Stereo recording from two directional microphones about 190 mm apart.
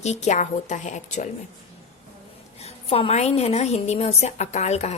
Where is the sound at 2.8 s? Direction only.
30° left (ahead or behind).